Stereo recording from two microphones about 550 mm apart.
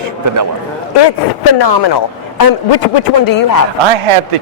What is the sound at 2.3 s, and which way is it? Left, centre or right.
A man's voice, left.